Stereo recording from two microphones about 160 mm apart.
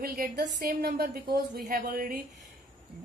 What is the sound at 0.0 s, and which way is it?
A woman's voice, 70° right (ahead or behind).